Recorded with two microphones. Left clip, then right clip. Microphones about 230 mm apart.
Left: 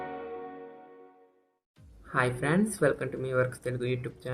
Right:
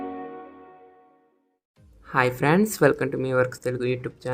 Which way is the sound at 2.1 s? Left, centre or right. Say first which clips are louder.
Right 7 dB; right.